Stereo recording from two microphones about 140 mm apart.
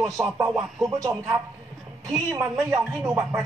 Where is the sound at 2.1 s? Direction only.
20° right (ahead or behind).